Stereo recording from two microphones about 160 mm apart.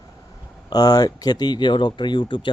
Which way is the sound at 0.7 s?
25° left (ahead or behind).